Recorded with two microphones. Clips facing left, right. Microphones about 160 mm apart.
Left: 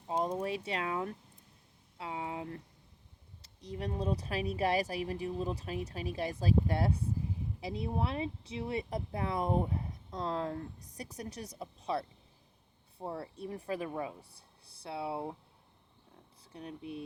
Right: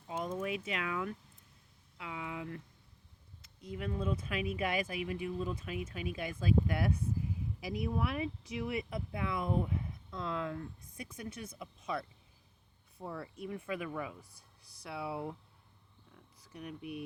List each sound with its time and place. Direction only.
0.1 s speech: 35° left (ahead or behind)
16.4 s speech: 30° left (ahead or behind)